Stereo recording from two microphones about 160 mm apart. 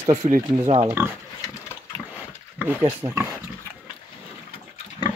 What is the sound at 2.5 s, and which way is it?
Speech, 15° right (ahead or behind).